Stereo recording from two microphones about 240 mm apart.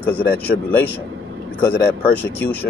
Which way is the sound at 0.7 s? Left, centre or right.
Centre.